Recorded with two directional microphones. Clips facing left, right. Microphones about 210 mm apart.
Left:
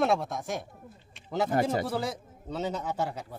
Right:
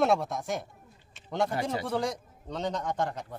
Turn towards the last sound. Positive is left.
turn(degrees=5)  # may be behind; listen again after turning